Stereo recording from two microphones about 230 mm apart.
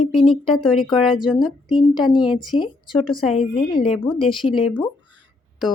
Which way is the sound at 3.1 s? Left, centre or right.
Left.